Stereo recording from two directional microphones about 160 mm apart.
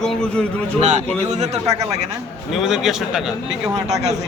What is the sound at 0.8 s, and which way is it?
Speech, 45° right (ahead or behind).